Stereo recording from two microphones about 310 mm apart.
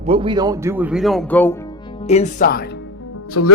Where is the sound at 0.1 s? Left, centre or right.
Centre.